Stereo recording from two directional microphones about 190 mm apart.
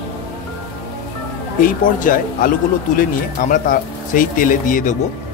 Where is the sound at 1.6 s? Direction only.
45° left (ahead or behind).